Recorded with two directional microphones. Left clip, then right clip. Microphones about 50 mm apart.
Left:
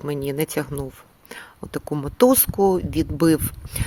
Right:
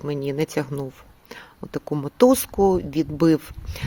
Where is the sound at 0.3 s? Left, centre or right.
Right.